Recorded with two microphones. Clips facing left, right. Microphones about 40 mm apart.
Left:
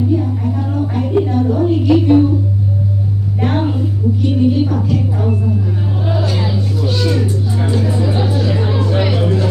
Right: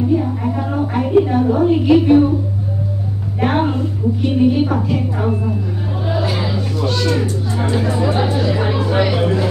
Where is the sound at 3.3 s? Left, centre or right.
Centre.